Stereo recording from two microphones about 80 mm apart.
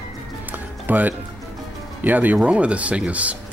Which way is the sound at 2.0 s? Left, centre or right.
Right.